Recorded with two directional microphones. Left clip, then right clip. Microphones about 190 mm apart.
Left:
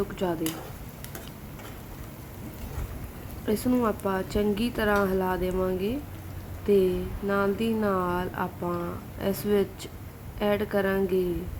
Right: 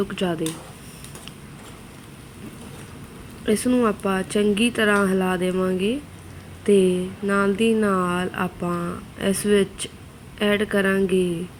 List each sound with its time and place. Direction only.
0.2 s speech: 5° right (ahead or behind)
3.4 s speech: 5° right (ahead or behind)